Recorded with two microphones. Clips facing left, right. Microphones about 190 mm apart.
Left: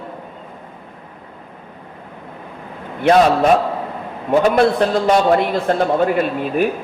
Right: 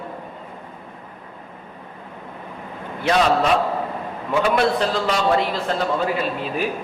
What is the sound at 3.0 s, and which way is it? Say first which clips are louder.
A man's voice: left 6 dB; 50° left (ahead or behind).